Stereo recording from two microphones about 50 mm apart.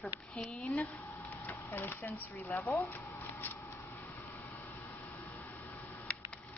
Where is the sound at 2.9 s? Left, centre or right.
Left.